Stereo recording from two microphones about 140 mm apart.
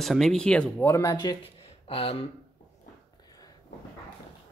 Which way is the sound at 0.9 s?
25° left (ahead or behind).